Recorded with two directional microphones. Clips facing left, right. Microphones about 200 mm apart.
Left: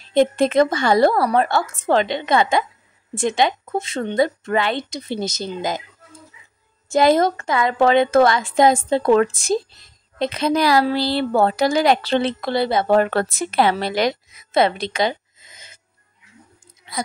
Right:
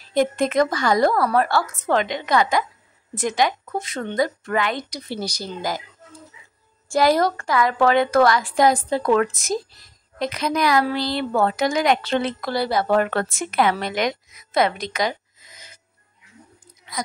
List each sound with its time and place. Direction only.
0.0 s a woman's voice: 25° left (ahead or behind)
6.9 s a woman's voice: 20° left (ahead or behind)